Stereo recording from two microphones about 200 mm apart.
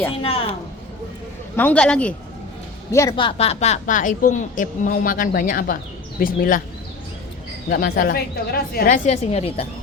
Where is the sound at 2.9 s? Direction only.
15° left (ahead or behind); by 6.6 s 45° left (ahead or behind).